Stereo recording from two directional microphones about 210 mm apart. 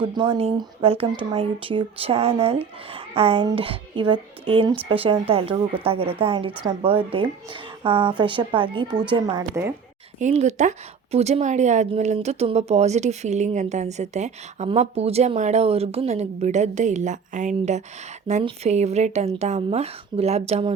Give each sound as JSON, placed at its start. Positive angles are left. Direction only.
{"t": 0.0, "sound": "speech", "side_deg": -25}
{"t": 10.2, "sound": "speech", "side_deg": -35}